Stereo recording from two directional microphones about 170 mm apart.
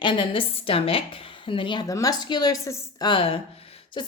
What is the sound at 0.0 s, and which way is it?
A woman's voice, 30° left (ahead or behind).